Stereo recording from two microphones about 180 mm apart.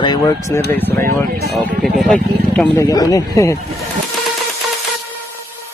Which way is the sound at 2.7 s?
20° left (ahead or behind).